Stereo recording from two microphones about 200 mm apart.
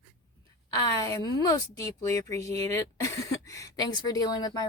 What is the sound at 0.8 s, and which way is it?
A woman's voice, 20° left (ahead or behind).